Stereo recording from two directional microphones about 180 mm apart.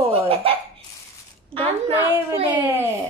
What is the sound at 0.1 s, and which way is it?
Hiccup, 30° right (ahead or behind).